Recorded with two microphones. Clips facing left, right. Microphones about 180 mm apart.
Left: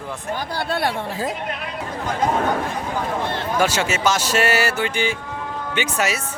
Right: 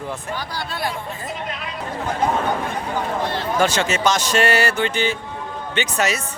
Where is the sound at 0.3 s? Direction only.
60° left (ahead or behind).